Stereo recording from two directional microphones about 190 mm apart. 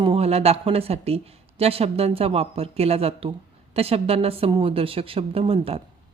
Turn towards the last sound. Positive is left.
turn(degrees=-30)  # may be behind; listen again after turning